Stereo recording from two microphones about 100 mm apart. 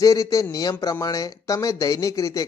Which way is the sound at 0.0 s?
35° left (ahead or behind).